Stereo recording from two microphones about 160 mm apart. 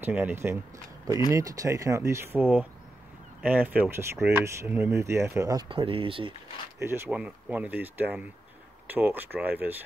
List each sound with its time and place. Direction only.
0.0 s speech: 10° right (ahead or behind)
5.7 s speech: 35° right (ahead or behind)
6.8 s speech: 10° right (ahead or behind)